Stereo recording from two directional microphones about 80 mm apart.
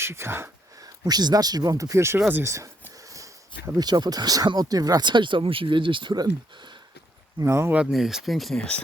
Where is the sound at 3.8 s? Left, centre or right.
Right.